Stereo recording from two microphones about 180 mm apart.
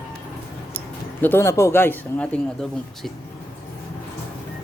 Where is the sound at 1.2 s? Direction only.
15° left (ahead or behind).